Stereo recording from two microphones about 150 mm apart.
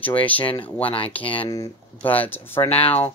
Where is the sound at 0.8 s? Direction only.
40° left (ahead or behind).